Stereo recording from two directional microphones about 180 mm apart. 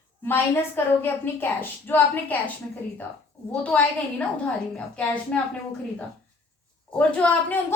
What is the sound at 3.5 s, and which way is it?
A woman's voice, 5° left (ahead or behind).